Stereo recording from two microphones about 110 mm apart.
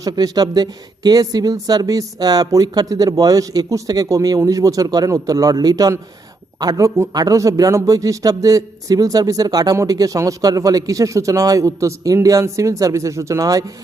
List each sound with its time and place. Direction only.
0.0 s a man's voice: 35° right (ahead or behind)